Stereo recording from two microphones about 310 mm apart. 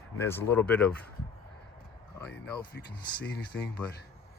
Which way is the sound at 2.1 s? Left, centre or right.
Centre.